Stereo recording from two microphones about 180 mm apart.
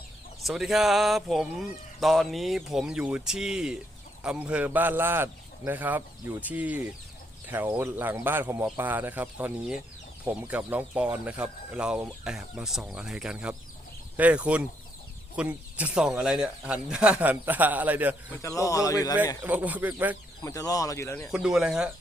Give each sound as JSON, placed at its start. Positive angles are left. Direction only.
{"t": 0.4, "sound": "speech", "side_deg": 0}
{"t": 18.3, "sound": "speech", "side_deg": 15}
{"t": 19.4, "sound": "speech", "side_deg": -10}
{"t": 20.4, "sound": "speech", "side_deg": 20}
{"t": 21.2, "sound": "speech", "side_deg": -5}